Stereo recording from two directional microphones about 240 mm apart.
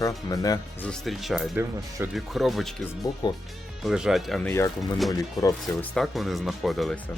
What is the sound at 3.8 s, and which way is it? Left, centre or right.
Speech, centre.